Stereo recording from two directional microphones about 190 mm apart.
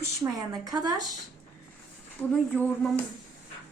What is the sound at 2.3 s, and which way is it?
Speech, 5° left (ahead or behind).